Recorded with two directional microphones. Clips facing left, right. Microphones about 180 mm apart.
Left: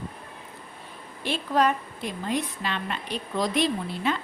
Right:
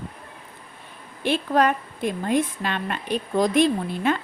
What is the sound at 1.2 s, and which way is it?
A woman's voice, 55° right (ahead or behind).